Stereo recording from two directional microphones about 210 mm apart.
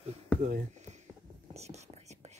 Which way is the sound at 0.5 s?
35° right (ahead or behind).